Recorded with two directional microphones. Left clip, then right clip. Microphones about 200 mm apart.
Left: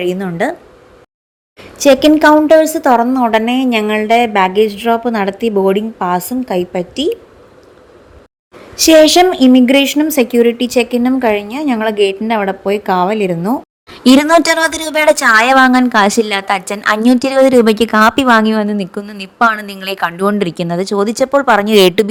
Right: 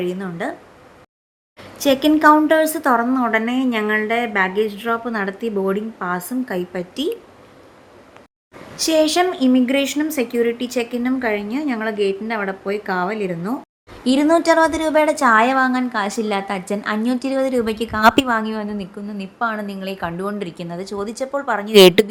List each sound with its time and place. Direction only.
0.0 s a woman's voice: 35° left (ahead or behind)
1.8 s a woman's voice: 25° left (ahead or behind)
8.7 s a woman's voice: 40° left (ahead or behind)
13.9 s a woman's voice: 50° left (ahead or behind)
18.0 s a woman's voice: centre (ahead or behind)
18.3 s a woman's voice: 45° left (ahead or behind)
21.7 s a woman's voice: centre (ahead or behind)